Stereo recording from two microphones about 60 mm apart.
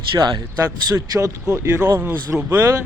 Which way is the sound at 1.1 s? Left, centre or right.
Right.